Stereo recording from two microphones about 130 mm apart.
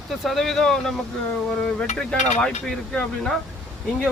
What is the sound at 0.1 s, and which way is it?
Speech, centre (ahead or behind).